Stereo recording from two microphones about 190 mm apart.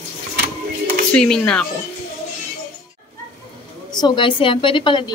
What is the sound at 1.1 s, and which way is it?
Speech, 5° left (ahead or behind).